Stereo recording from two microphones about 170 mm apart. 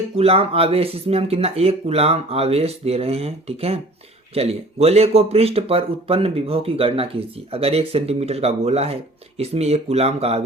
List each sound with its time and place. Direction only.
0.2 s speech: 35° right (ahead or behind)